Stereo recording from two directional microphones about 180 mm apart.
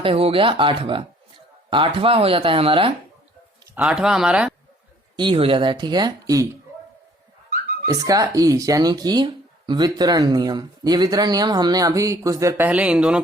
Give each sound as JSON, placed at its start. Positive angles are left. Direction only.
{"t": 0.0, "sound": "speech", "side_deg": -30}
{"t": 3.8, "sound": "speech", "side_deg": -5}
{"t": 5.1, "sound": "speech", "side_deg": -25}
{"t": 7.9, "sound": "speech", "side_deg": -20}